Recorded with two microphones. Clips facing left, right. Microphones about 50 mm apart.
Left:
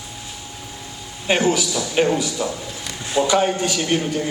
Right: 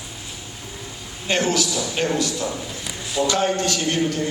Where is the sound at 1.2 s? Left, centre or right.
Centre.